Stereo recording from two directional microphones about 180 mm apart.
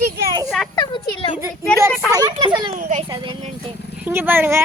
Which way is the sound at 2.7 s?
50° right (ahead or behind).